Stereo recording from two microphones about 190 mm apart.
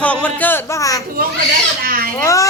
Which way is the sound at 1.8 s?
50° right (ahead or behind).